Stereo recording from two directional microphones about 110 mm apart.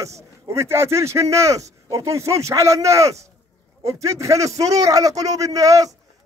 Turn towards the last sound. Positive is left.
turn(degrees=-30)  # may be behind; listen again after turning